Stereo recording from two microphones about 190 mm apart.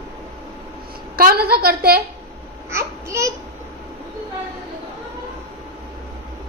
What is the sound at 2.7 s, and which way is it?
Babbling, 15° right (ahead or behind).